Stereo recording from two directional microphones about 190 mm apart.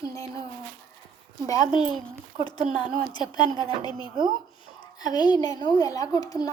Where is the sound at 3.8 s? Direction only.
20° left (ahead or behind).